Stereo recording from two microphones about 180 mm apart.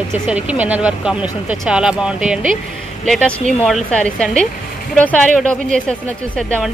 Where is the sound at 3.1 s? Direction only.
5° left (ahead or behind).